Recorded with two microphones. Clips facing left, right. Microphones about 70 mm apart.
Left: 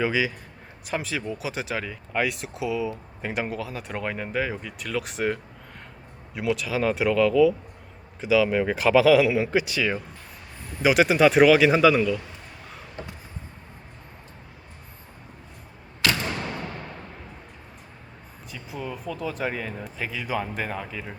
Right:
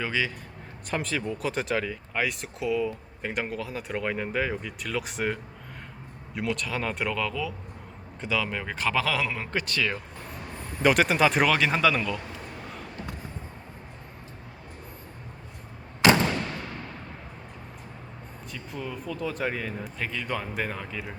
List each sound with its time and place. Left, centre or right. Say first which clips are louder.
0.0 s speech: left 5 dB; centre
16.4 s a sound: left 2 dB; centre
18.5 s speech: left 2 dB; centre